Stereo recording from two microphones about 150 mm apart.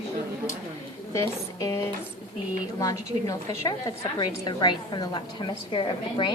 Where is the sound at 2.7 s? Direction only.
25° left (ahead or behind).